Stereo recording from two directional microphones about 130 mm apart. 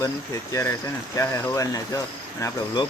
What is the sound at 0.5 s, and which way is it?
Speech, 20° left (ahead or behind).